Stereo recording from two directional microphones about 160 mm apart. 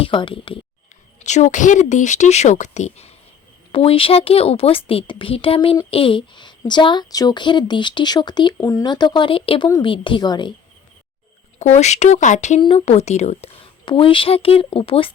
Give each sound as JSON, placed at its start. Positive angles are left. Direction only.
{"t": 0.0, "sound": "a woman's voice", "side_deg": 30}
{"t": 1.2, "sound": "a woman's voice", "side_deg": 50}
{"t": 11.6, "sound": "a woman's voice", "side_deg": 45}